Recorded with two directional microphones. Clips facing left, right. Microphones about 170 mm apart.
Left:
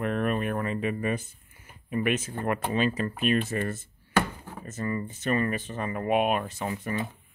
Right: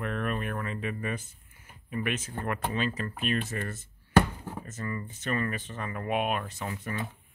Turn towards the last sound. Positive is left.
turn(degrees=15)  # may be behind; listen again after turning